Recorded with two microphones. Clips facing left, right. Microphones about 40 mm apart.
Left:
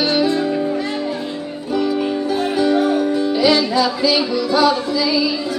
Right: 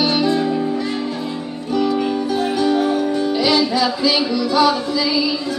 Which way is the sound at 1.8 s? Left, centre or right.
Centre.